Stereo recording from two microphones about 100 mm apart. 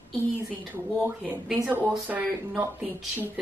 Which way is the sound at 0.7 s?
20° right (ahead or behind).